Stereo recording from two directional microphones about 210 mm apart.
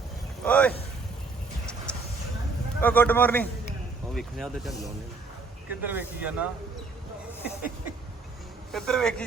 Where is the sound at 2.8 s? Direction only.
10° left (ahead or behind); by 6.5 s 5° right (ahead or behind).